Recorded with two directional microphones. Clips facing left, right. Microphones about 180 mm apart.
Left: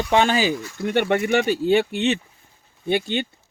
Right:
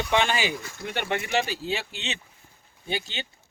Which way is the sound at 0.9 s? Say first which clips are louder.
Left 8 dB; 55° left (ahead or behind).